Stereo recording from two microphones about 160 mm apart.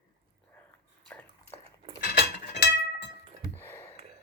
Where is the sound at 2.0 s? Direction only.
90° left.